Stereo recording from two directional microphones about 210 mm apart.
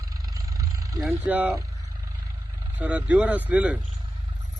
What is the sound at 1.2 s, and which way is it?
Speech, 10° right (ahead or behind).